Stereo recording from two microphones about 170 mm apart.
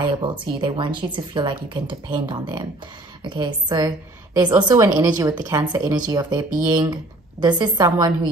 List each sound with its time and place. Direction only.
0.2 s a woman's voice: 25° right (ahead or behind)